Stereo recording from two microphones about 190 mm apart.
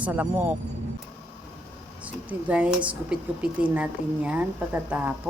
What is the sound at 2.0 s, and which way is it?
Speech, 5° right (ahead or behind).